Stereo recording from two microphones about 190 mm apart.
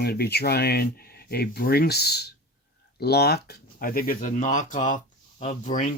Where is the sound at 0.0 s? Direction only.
55° left (ahead or behind).